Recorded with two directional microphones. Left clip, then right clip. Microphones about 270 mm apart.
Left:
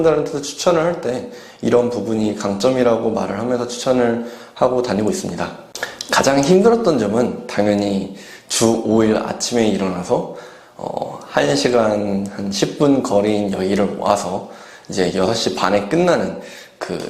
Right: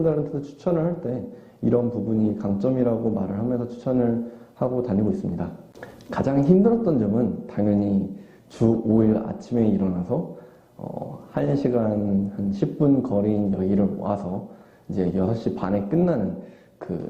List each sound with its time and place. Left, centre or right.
0.0 s speech: centre
6.5 s speech: left
6.9 s speech: centre
10.8 s speech: left
11.3 s speech: centre
16.8 s a sound: centre